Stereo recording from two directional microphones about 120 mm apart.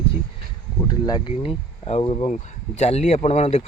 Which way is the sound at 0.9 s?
35° left (ahead or behind).